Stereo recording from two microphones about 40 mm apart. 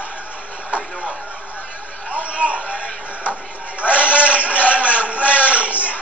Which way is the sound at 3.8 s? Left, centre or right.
Left.